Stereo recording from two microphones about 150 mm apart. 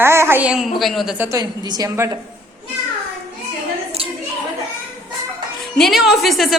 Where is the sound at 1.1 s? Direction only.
20° right (ahead or behind).